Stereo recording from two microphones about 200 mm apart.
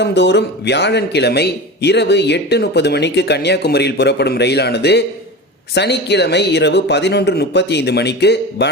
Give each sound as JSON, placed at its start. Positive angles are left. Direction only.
{"t": 0.0, "sound": "a man's voice", "side_deg": 60}